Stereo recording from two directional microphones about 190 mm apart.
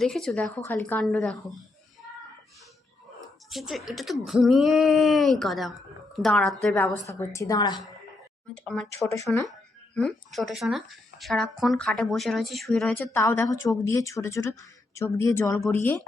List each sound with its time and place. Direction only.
0.0 s speech: centre (ahead or behind)
3.5 s speech: centre (ahead or behind)
7.1 s a woman's voice: 15° left (ahead or behind)
8.5 s speech: 5° left (ahead or behind)
9.1 s a woman's voice: 15° left (ahead or behind)
9.5 s a woman's voice: centre (ahead or behind)